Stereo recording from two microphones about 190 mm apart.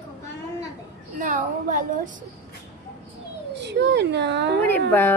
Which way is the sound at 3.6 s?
65° right (ahead or behind).